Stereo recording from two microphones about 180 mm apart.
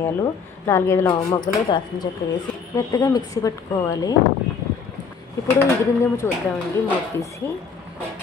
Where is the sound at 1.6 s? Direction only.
25° left (ahead or behind).